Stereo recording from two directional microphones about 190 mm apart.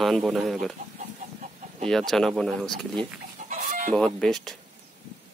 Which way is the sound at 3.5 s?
40° right (ahead or behind).